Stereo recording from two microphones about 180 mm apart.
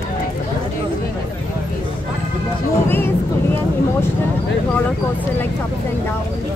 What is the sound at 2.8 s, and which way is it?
Speech, 10° left (ahead or behind).